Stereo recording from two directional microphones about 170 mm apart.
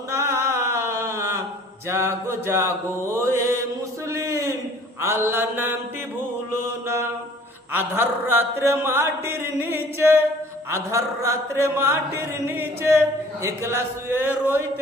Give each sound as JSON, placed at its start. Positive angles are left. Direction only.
{"t": 0.1, "sound": "mantra", "side_deg": -15}
{"t": 4.1, "sound": "a sound", "side_deg": -20}
{"t": 4.9, "sound": "mantra", "side_deg": -15}